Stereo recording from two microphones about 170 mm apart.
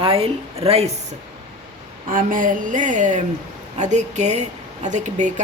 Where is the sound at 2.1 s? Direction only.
50° right (ahead or behind).